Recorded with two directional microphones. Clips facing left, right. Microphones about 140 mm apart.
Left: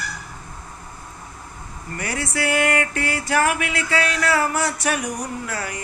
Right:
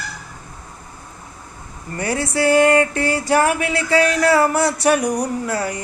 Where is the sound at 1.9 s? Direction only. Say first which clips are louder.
Right 6 dB; 30° right (ahead or behind).